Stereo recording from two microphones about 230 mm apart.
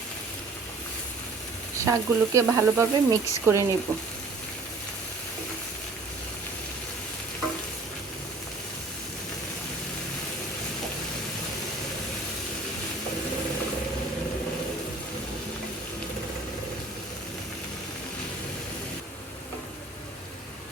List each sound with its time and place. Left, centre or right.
1.8 s speech: centre